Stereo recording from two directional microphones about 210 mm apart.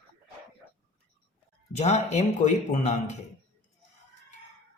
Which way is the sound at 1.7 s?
30° left (ahead or behind).